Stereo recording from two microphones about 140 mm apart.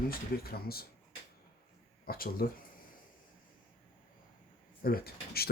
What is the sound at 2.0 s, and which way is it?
Speech, 90° left.